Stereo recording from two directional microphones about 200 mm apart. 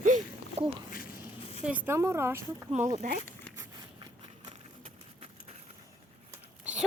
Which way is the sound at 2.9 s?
40° right (ahead or behind).